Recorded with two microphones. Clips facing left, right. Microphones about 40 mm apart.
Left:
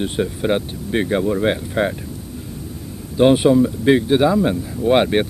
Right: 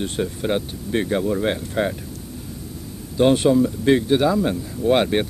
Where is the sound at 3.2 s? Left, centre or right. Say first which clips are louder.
Left 3 dB; centre.